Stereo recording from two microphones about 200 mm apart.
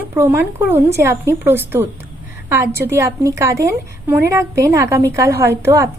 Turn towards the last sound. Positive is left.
turn(degrees=-15)  # may be behind; listen again after turning